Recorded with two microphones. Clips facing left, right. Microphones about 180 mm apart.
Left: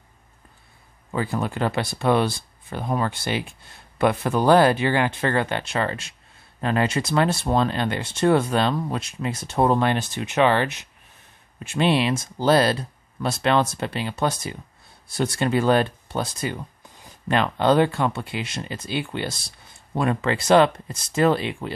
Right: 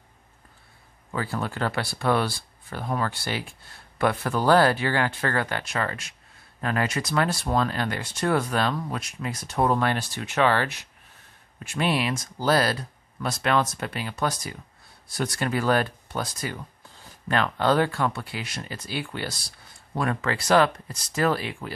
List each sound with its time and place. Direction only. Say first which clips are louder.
1.1 s speech: left 4 dB; 20° left (ahead or behind)